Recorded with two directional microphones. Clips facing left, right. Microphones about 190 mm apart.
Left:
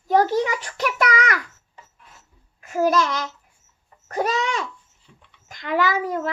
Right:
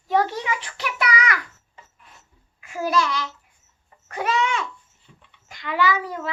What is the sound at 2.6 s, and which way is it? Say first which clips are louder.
A child's voice: left 4 dB; 45° left (ahead or behind).